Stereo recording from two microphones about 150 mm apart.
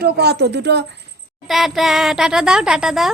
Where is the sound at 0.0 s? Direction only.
90° right.